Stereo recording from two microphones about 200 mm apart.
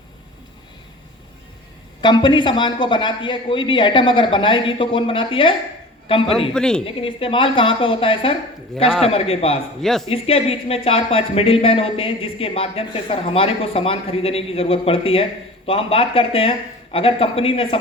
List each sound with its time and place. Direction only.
2.0 s speech: 20° left (ahead or behind)
6.5 s speech: 5° left (ahead or behind)
6.8 s speech: 25° left (ahead or behind)
9.8 s speech: centre (ahead or behind)
10.1 s speech: 30° left (ahead or behind)